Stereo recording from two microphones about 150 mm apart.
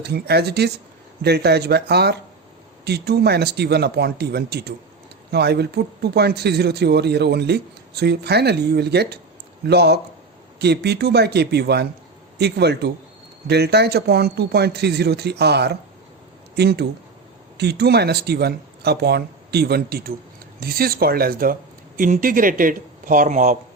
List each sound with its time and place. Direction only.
0.0 s speech: 90° right
21.9 s speech: 65° right (ahead or behind)